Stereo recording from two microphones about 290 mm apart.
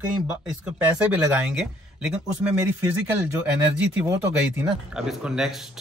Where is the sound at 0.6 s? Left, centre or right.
Centre.